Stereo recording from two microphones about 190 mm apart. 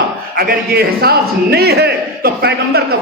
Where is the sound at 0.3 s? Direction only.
55° right (ahead or behind).